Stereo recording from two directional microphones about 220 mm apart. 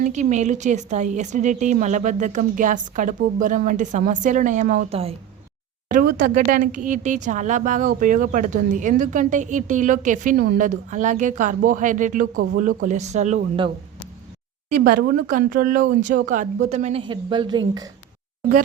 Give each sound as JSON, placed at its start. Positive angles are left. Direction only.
{"t": 0.0, "sound": "speech", "side_deg": -35}
{"t": 5.9, "sound": "speech", "side_deg": -40}
{"t": 14.8, "sound": "speech", "side_deg": -45}